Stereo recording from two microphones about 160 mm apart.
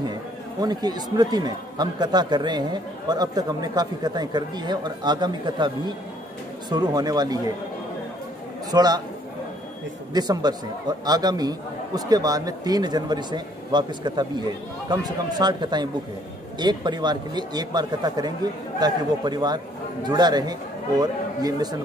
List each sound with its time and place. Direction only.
0.1 s speech: 25° right (ahead or behind)
8.7 s speech: 25° right (ahead or behind)
10.1 s speech: 25° right (ahead or behind)